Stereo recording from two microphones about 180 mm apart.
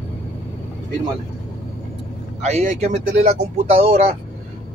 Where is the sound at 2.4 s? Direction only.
40° right (ahead or behind).